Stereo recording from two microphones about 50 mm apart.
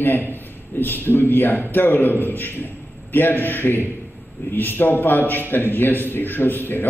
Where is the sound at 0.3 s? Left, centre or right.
Left.